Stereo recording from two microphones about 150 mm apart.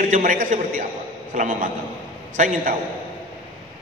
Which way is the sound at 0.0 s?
60° right (ahead or behind).